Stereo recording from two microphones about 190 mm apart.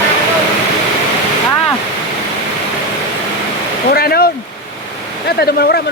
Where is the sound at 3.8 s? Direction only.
55° left (ahead or behind).